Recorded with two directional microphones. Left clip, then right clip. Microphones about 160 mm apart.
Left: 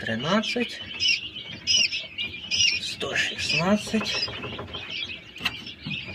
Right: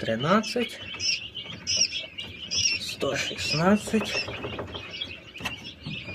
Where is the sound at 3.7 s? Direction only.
50° right (ahead or behind).